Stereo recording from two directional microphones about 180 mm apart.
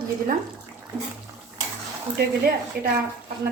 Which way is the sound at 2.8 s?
60° right (ahead or behind).